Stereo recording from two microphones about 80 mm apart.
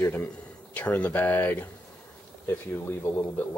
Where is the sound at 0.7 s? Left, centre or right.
Centre.